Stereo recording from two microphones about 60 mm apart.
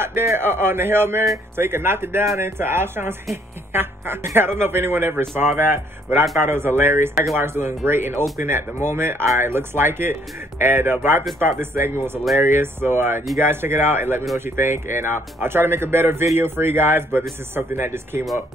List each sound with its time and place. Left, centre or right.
0.0 s speech: right